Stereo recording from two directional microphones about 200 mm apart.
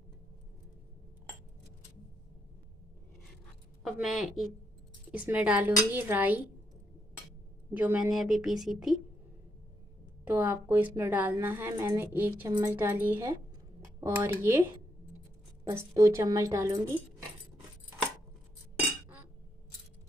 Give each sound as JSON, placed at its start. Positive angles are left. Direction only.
{"t": 3.8, "sound": "a woman's voice", "side_deg": 0}
{"t": 7.7, "sound": "speech", "side_deg": -5}
{"t": 10.2, "sound": "a woman's voice", "side_deg": -10}